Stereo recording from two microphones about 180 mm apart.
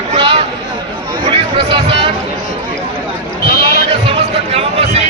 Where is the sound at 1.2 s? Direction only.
30° right (ahead or behind).